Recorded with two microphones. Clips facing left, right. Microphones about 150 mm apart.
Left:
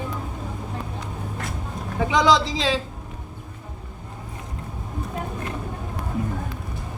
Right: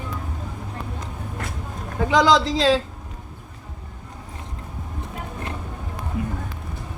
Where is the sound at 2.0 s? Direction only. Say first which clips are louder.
Right 2 dB; centre (ahead or behind).